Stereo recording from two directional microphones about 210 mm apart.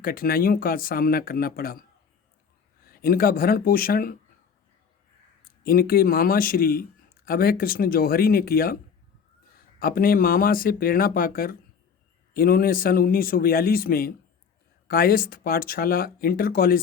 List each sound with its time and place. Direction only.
0.0 s speech: 45° left (ahead or behind)
2.8 s speech: 45° left (ahead or behind)
5.5 s speech: 45° left (ahead or behind)